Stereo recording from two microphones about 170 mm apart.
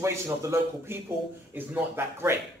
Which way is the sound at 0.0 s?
15° right (ahead or behind).